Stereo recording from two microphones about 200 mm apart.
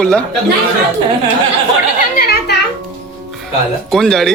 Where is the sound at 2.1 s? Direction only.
50° left (ahead or behind).